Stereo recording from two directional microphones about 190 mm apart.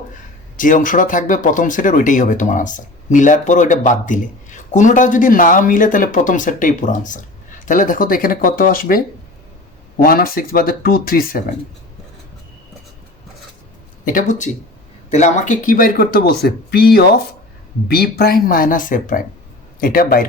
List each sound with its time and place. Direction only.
0.5 s speech: 45° left (ahead or behind)
10.0 s speech: 50° left (ahead or behind)
14.0 s speech: 45° left (ahead or behind)